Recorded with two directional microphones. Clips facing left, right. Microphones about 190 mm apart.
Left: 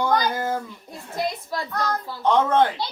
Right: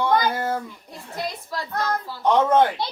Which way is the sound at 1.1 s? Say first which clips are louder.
Left 3 dB; 25° left (ahead or behind).